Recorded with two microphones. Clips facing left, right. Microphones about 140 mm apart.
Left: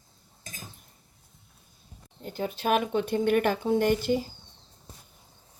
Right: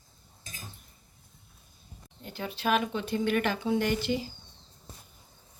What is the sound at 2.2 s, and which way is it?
Speech, 40° left (ahead or behind).